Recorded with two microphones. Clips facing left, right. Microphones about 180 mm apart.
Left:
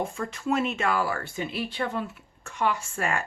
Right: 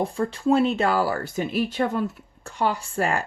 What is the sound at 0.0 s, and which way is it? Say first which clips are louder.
Speech: right 6 dB; 35° right (ahead or behind).